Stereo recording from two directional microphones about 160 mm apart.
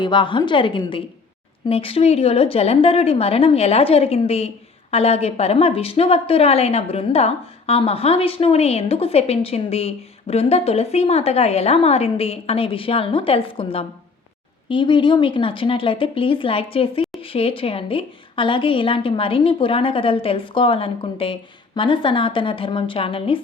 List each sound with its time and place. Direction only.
0.0 s speech: 30° left (ahead or behind)